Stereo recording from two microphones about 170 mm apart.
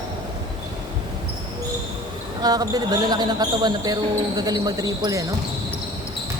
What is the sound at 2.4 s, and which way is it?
Speech, 20° right (ahead or behind).